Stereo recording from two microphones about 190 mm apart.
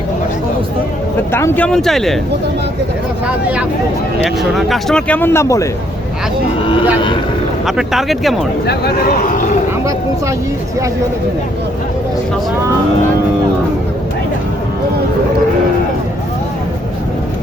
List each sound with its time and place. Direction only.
1.3 s speech: 10° left (ahead or behind)
4.5 s speech: centre (ahead or behind)
7.8 s speech: centre (ahead or behind)
8.6 s speech: 55° left (ahead or behind)